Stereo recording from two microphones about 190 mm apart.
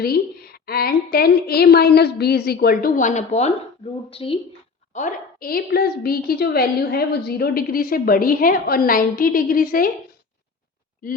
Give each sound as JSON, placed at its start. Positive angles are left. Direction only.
{"t": 0.0, "sound": "a woman's voice", "side_deg": 55}
{"t": 4.9, "sound": "a woman's voice", "side_deg": 45}